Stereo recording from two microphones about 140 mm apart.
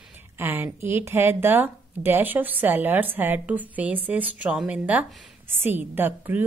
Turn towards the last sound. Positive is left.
turn(degrees=-15)  # may be behind; listen again after turning